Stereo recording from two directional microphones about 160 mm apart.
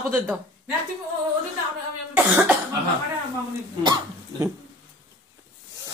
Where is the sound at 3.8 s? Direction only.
25° right (ahead or behind).